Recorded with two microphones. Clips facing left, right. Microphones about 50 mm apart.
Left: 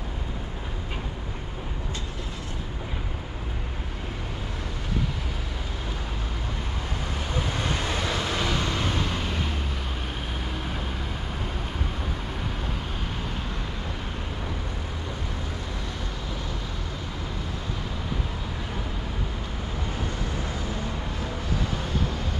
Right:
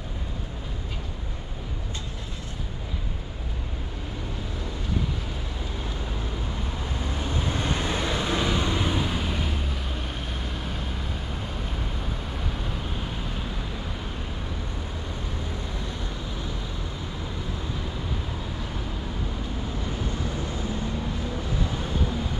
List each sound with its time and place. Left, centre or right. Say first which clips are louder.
7.9 s vehicle: right 1 dB; right; by 9.6 s centre